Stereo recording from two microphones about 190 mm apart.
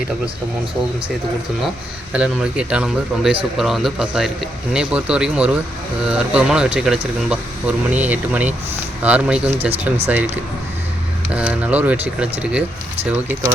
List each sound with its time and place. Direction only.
2.1 s speech: 5° right (ahead or behind)
9.5 s speech: 30° right (ahead or behind)
11.3 s speech: 5° right (ahead or behind)